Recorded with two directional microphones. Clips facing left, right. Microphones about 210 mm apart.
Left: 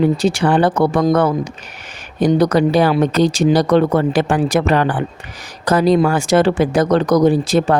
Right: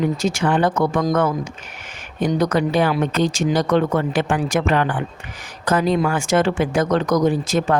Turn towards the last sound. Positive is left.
turn(degrees=35)  # may be behind; listen again after turning